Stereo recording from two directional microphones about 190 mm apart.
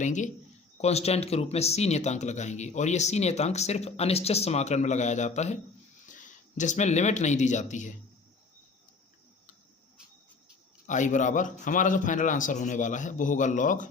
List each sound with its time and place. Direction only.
0.0 s speech: 40° left (ahead or behind)
10.8 s speech: 40° left (ahead or behind)